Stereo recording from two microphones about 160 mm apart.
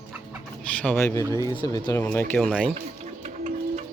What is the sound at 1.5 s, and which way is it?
Speech, 30° left (ahead or behind).